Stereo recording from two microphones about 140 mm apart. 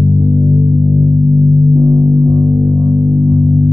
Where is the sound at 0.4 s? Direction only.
25° right (ahead or behind).